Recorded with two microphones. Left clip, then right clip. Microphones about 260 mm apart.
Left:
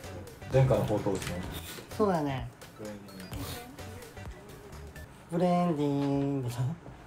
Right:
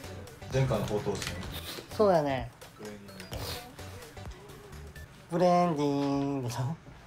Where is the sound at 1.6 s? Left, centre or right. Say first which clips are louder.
Right 4 dB; right.